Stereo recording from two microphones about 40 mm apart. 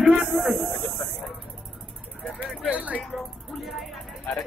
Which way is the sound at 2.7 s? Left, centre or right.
Right.